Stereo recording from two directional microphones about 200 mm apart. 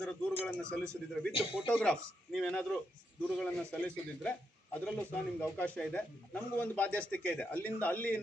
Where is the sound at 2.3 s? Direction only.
5° left (ahead or behind).